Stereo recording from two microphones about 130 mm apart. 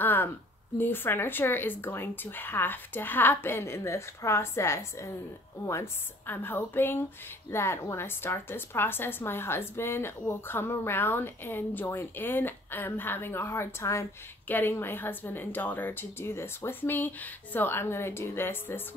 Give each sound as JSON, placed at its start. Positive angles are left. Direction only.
{"t": 0.0, "sound": "a woman's voice", "side_deg": 15}